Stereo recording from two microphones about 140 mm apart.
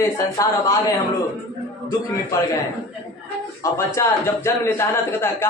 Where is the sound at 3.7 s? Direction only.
20° left (ahead or behind).